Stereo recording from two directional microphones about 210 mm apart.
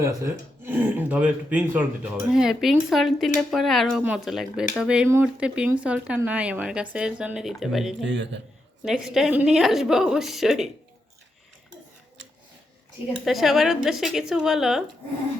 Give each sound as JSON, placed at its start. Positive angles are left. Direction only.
{"t": 0.0, "sound": "speech", "side_deg": -15}
{"t": 8.0, "sound": "a man's voice", "side_deg": -60}
{"t": 8.8, "sound": "speech", "side_deg": 0}
{"t": 13.2, "sound": "speech", "side_deg": 0}